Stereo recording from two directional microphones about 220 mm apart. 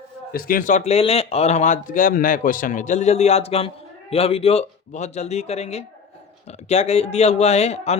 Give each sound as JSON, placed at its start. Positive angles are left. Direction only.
{"t": 0.3, "sound": "speech", "side_deg": 40}